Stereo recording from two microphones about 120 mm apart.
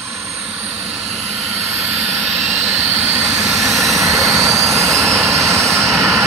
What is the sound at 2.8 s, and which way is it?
Vehicle, 15° right (ahead or behind).